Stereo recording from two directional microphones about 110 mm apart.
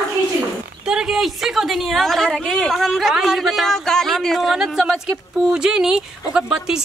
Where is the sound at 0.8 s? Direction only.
5° right (ahead or behind).